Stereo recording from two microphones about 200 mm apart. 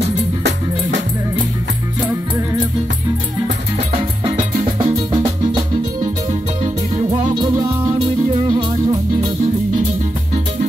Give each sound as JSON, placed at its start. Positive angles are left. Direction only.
{"t": 0.4, "sound": "music", "side_deg": -65}
{"t": 3.9, "sound": "music", "side_deg": -25}
{"t": 6.6, "sound": "music", "side_deg": -35}
{"t": 7.2, "sound": "music", "side_deg": -20}